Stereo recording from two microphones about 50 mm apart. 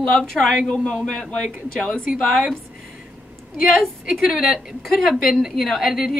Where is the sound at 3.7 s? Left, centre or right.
Centre.